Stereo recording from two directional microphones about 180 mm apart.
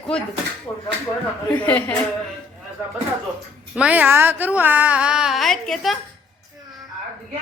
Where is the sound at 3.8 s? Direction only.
10° right (ahead or behind).